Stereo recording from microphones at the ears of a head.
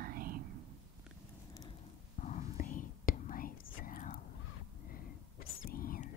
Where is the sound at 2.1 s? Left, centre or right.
Left.